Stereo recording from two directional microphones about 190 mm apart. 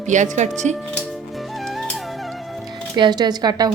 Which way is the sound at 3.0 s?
20° right (ahead or behind).